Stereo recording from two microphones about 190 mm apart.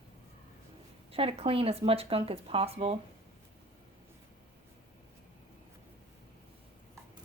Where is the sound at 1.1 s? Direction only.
30° right (ahead or behind).